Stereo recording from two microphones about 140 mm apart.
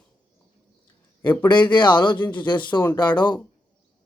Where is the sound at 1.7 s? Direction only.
35° left (ahead or behind).